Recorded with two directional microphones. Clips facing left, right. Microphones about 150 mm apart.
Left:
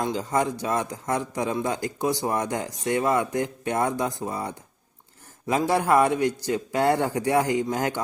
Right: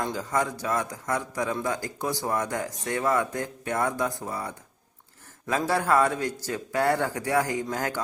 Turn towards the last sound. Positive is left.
turn(degrees=20)  # may be behind; listen again after turning